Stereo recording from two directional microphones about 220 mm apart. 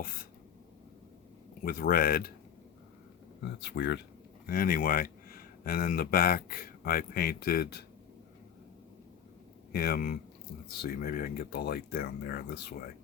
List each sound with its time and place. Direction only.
1.6 s speech: 40° left (ahead or behind)
3.4 s speech: 55° left (ahead or behind)
4.4 s speech: 40° left (ahead or behind)
9.7 s speech: 45° left (ahead or behind)